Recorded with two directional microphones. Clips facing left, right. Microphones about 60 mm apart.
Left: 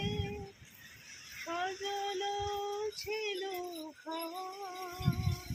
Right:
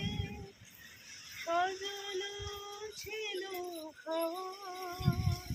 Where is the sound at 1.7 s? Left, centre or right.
Left.